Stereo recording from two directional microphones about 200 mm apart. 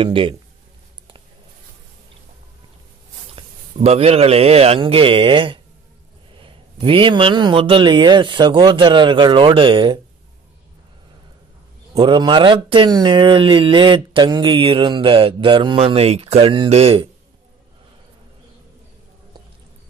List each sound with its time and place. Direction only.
0.0 s speech: 25° right (ahead or behind)
3.3 s a man's voice: 30° right (ahead or behind)
11.9 s speech: 20° right (ahead or behind)